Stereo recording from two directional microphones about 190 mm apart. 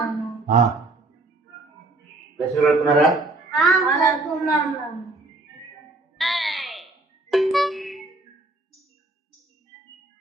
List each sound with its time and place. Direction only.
0.0 s music: centre (ahead or behind)
2.6 s a man's voice: centre (ahead or behind)
6.1 s music: centre (ahead or behind)